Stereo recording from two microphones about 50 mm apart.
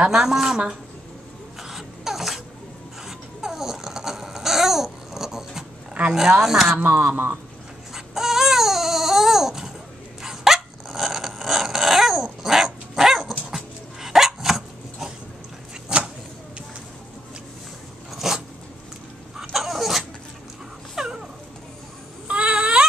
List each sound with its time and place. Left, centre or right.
0.1 s speech: centre
1.6 s a sound: centre
3.1 s babbling: centre
6.1 s speech: centre
6.8 s speech: right
7.9 s baby cry: centre
10.2 s dog: centre
15.9 s a sound: centre
18.1 s dog: centre
19.5 s vehicle: centre
20.9 s dog: centre
22.3 s a sound: right